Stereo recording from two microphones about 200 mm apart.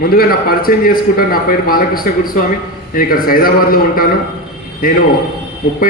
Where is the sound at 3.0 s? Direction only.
45° left (ahead or behind).